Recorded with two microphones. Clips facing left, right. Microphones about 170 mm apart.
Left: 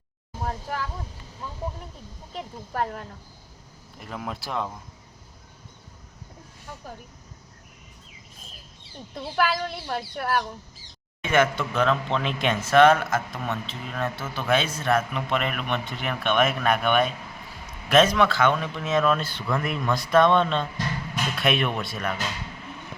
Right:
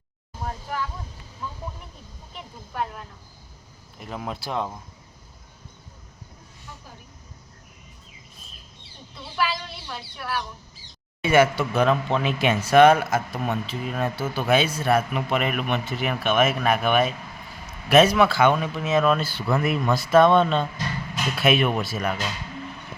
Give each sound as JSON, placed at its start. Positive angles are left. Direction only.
{"t": 2.3, "sound": "speech", "side_deg": 40}
{"t": 4.0, "sound": "speech", "side_deg": 0}
{"t": 9.1, "sound": "speech", "side_deg": 50}
{"t": 11.2, "sound": "speech", "side_deg": -10}